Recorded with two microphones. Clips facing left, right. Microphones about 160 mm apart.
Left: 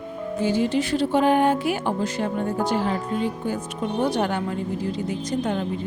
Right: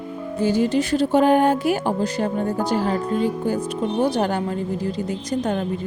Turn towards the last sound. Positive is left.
turn(degrees=-35)  # may be behind; listen again after turning